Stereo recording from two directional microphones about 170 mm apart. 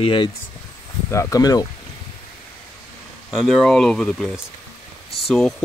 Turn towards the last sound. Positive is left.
turn(degrees=5)  # may be behind; listen again after turning